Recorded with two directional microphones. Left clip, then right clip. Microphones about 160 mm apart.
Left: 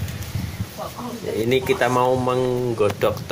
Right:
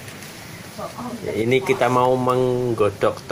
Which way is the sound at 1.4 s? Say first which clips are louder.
Right 1 dB; 20° right (ahead or behind).